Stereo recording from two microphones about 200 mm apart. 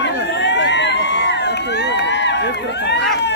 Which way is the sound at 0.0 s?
60° left (ahead or behind).